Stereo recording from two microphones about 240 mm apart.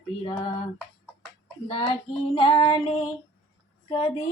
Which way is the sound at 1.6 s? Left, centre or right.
Left.